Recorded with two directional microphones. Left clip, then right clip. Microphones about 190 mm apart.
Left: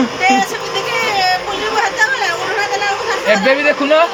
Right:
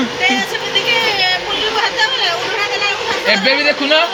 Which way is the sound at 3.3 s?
55° left (ahead or behind).